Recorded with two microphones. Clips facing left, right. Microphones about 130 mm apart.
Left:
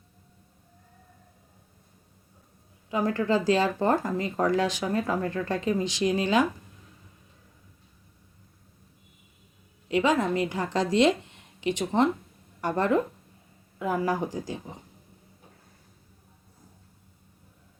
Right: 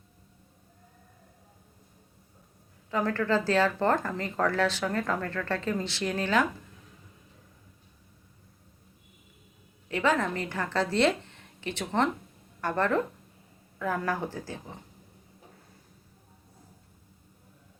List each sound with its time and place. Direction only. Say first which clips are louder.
2.9 s speech: left 2 dB; 15° left (ahead or behind)
9.9 s a woman's voice: left 3 dB; 15° left (ahead or behind)